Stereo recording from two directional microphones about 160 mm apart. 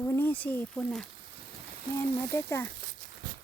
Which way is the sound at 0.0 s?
10° left (ahead or behind).